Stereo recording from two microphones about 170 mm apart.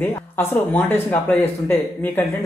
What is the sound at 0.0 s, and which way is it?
Speech, 10° left (ahead or behind).